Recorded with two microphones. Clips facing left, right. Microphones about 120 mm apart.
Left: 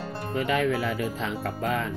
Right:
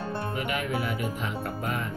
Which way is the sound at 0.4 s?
90° left.